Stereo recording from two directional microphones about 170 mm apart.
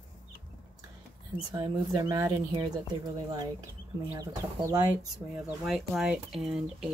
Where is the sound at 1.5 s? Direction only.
25° right (ahead or behind).